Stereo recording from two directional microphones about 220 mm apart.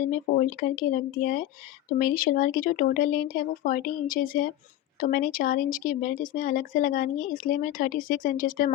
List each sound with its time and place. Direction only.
0.1 s speech: 40° left (ahead or behind)